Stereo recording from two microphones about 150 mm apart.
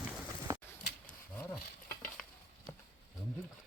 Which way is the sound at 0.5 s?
20° right (ahead or behind).